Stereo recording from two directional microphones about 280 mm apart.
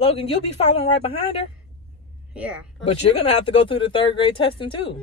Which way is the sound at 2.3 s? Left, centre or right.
Centre.